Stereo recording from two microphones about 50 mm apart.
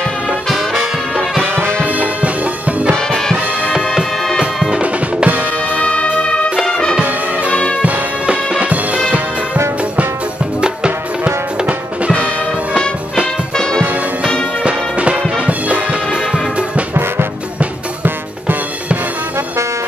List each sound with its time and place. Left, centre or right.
1.5 s music: right
1.9 s music: right
4.8 s music: right
5.9 s music: centre
7.8 s music: right
10.6 s music: centre
14.6 s music: right
16.1 s music: centre